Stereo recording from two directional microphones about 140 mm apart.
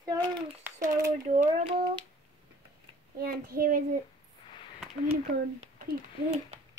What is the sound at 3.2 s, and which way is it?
Speech, 90° right.